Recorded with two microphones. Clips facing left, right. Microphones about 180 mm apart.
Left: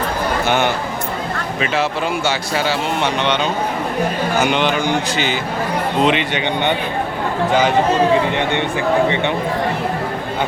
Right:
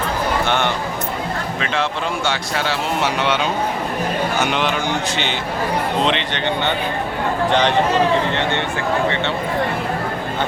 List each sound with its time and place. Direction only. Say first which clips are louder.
0.4 s speech: left 2 dB; 5° left (ahead or behind)
8.3 s speech: left 2 dB; 15° left (ahead or behind)